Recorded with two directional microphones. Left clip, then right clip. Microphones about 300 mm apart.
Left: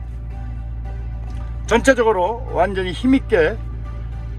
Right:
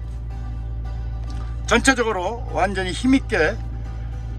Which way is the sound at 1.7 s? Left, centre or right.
Centre.